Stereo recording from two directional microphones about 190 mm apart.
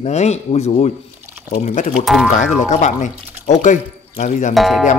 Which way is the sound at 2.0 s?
Centre (ahead or behind).